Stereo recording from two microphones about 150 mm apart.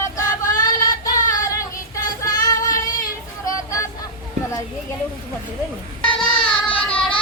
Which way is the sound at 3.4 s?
20° left (ahead or behind).